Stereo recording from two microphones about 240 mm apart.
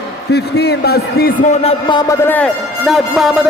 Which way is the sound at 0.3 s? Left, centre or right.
Left.